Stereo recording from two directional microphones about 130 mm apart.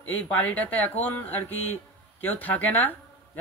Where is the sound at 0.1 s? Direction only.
10° left (ahead or behind).